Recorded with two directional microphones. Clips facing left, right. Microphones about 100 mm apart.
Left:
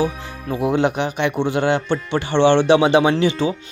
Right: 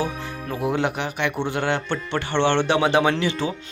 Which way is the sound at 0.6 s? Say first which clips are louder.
Left 5 dB; 20° left (ahead or behind).